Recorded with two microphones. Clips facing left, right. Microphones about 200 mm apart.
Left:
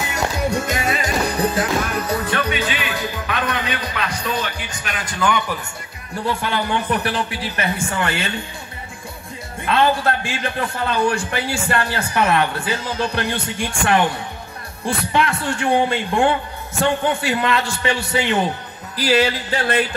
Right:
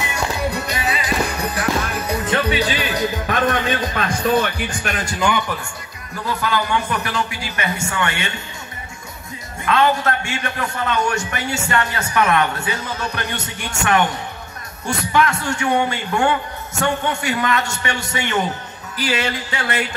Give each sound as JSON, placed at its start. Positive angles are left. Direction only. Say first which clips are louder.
{"t": 0.1, "sound": "music", "louder": "left 3 dB", "side_deg": 50}
{"t": 1.4, "sound": "music", "louder": "left 5 dB", "side_deg": 25}
{"t": 2.0, "sound": "music", "louder": "right 1 dB", "side_deg": -20}
{"t": 2.5, "sound": "music", "louder": "right 3 dB", "side_deg": -40}
{"t": 6.1, "sound": "a man's voice", "louder": "even", "side_deg": 30}
{"t": 9.7, "sound": "a man's voice", "louder": "even", "side_deg": 30}